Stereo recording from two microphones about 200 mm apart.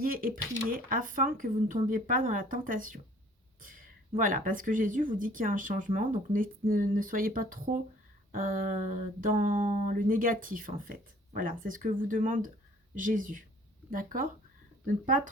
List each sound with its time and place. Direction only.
0.0 s speech: 45° right (ahead or behind)
3.6 s a sound: 45° right (ahead or behind)
4.2 s speech: 45° right (ahead or behind)